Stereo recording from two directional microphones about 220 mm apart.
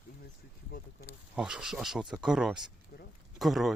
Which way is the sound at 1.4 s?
5° right (ahead or behind).